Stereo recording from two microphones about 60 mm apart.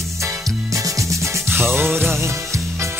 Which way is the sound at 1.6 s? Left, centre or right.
Centre.